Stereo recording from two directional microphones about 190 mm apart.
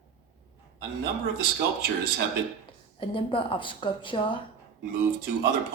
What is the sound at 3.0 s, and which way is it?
A woman's voice, 25° left (ahead or behind).